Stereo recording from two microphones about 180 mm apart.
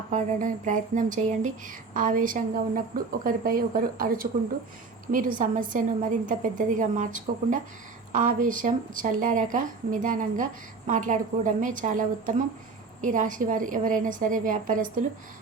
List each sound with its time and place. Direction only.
0.1 s speech: 45° right (ahead or behind)